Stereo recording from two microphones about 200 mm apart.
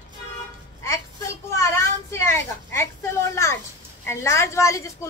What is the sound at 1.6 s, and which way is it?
A child's voice, 15° left (ahead or behind).